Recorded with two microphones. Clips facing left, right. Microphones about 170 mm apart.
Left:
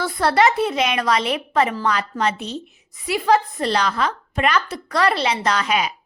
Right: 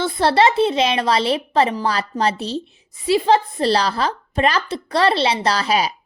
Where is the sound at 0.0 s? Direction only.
25° right (ahead or behind).